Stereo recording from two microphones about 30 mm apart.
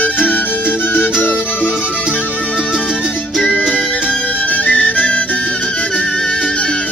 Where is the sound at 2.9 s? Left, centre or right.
Right.